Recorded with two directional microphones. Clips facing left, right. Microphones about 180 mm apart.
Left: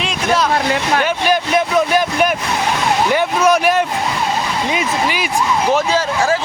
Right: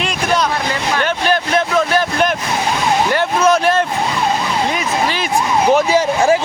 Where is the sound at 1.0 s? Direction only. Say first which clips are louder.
Left 1 dB; 10° left (ahead or behind).